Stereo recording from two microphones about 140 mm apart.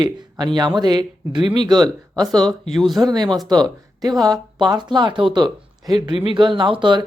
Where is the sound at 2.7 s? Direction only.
Centre (ahead or behind).